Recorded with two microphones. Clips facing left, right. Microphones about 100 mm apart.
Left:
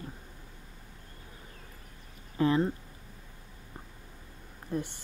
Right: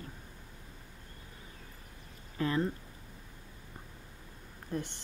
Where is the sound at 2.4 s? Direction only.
25° left (ahead or behind).